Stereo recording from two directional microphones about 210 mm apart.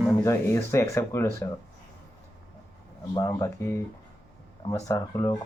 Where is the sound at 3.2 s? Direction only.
15° left (ahead or behind).